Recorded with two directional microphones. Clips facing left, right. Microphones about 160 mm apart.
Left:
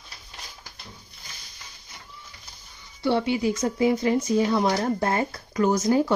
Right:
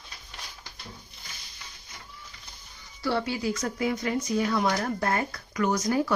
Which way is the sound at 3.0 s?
20° left (ahead or behind).